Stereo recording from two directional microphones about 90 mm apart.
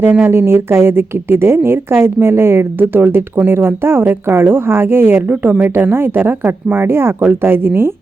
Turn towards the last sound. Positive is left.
turn(degrees=-25)  # may be behind; listen again after turning